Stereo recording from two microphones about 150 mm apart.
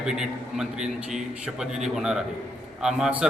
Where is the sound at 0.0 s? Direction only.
5° right (ahead or behind).